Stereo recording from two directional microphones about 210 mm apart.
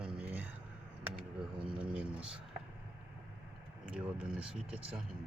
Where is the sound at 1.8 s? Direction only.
5° right (ahead or behind).